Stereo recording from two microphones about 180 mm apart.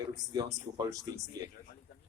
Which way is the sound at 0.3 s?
20° right (ahead or behind).